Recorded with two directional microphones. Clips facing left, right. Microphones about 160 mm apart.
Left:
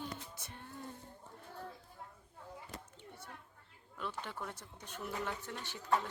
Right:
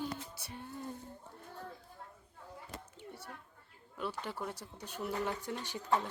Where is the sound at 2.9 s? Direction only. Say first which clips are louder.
Right 4 dB; 5° right (ahead or behind).